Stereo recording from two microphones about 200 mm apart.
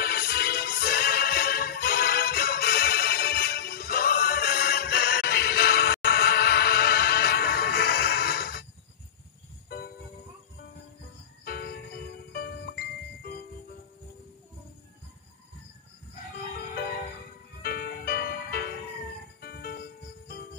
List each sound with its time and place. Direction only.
0.0 s music: 50° left (ahead or behind)
11.4 s music: 50° left (ahead or behind)
17.6 s music: 50° left (ahead or behind)